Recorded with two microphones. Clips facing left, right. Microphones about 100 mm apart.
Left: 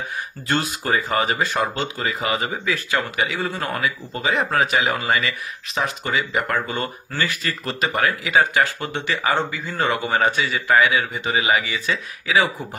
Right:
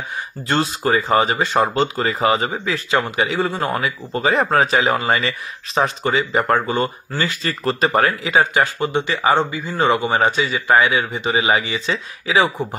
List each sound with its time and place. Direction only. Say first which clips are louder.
0.5 s speech: right 4 dB; 30° right (ahead or behind)
7.1 s speech: right 2 dB; 20° right (ahead or behind)
7.4 s speech: right 5 dB; 35° right (ahead or behind)
8.1 s speech: right 2 dB; 25° right (ahead or behind)